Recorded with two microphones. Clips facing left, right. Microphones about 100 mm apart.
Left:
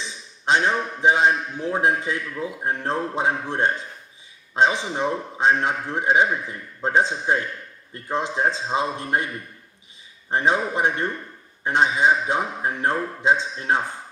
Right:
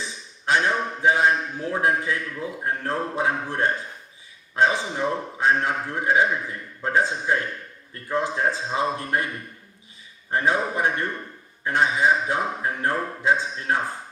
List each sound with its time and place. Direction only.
0.0 s a man's voice: 20° left (ahead or behind)